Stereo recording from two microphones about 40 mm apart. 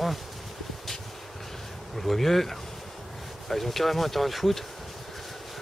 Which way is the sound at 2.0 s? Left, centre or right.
Centre.